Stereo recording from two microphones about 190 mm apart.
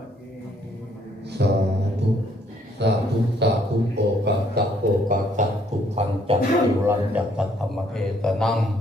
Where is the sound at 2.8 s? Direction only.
65° right (ahead or behind).